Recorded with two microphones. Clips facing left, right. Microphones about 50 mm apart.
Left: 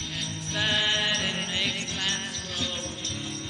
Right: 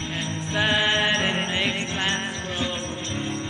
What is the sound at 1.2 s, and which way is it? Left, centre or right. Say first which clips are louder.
Jingle bell: right 5 dB; right.